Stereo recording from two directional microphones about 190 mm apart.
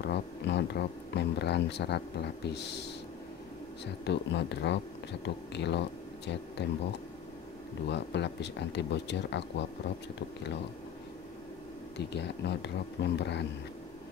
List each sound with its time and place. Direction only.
0.0 s speech: 65° left (ahead or behind)
7.9 s speech: 65° left (ahead or behind)
12.0 s speech: 65° left (ahead or behind)